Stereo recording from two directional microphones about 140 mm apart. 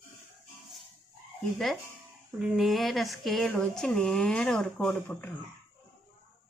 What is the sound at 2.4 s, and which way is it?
Speech, centre (ahead or behind).